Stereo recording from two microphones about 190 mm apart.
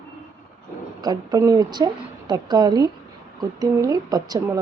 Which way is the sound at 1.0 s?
20° right (ahead or behind).